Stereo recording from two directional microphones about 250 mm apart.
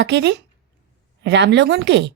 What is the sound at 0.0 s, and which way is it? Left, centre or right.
A woman's voice, right.